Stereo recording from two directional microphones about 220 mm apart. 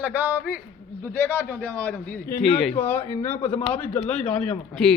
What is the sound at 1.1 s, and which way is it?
A man's voice, 5° left (ahead or behind).